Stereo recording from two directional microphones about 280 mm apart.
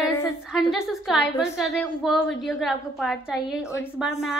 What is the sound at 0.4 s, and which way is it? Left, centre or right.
A woman's voice, centre.